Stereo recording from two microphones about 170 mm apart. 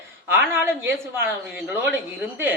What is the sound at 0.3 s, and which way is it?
Speech, 15° right (ahead or behind).